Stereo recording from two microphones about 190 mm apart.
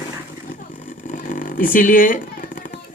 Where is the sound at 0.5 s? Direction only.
40° left (ahead or behind).